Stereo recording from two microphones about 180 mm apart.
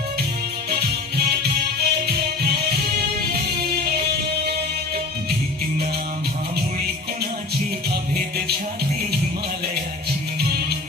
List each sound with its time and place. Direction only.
0.7 s music: 60° right (ahead or behind)
6.7 s music: 60° right (ahead or behind)